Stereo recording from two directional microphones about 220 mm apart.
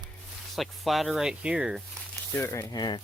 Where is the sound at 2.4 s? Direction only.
10° left (ahead or behind).